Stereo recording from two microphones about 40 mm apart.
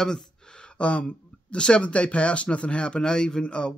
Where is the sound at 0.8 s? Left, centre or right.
Left.